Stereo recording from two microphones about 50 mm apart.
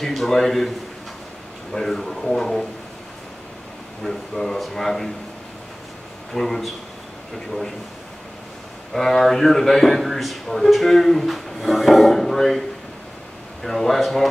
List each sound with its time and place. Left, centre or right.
0.0 s a man's voice: centre
4.0 s speech: centre
6.3 s a man's voice: centre
8.9 s a man's voice: centre